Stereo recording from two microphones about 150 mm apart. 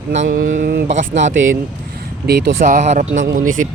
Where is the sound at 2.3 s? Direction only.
90° right.